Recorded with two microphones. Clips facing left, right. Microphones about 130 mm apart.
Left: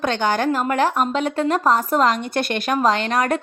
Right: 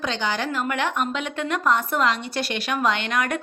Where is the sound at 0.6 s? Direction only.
35° left (ahead or behind).